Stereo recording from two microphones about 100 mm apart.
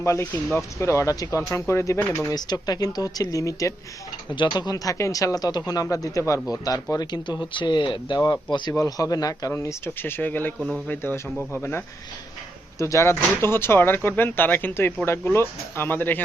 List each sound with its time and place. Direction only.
0.0 s speech: 30° left (ahead or behind)
2.2 s speech: 40° left (ahead or behind)
4.3 s speech: 45° left (ahead or behind)
8.7 s speech: 35° left (ahead or behind); by 10.5 s 20° left (ahead or behind)
10.6 s speech: 10° right (ahead or behind)
10.8 s speech: 20° left (ahead or behind)
12.8 s speech: 30° left (ahead or behind)